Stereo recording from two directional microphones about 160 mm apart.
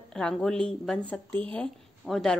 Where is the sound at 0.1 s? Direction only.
5° left (ahead or behind).